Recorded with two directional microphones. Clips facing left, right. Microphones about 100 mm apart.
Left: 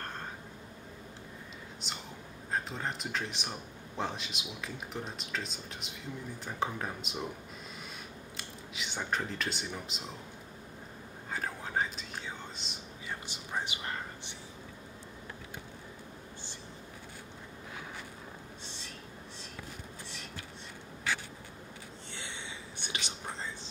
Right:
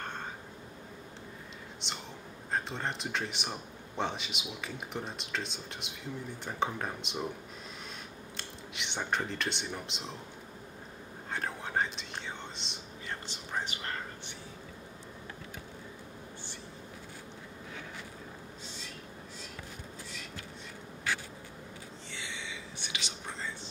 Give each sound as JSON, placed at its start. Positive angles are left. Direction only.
{"t": 1.8, "sound": "a man's voice", "side_deg": 5}
{"t": 8.4, "sound": "speech", "side_deg": 5}
{"t": 11.3, "sound": "whispering", "side_deg": 0}
{"t": 22.8, "sound": "whispering", "side_deg": 45}